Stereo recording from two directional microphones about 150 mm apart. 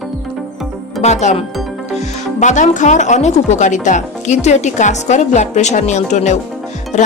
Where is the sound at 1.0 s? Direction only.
50° left (ahead or behind).